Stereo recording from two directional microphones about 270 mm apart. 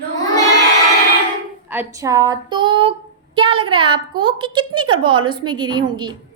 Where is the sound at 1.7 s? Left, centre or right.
Centre.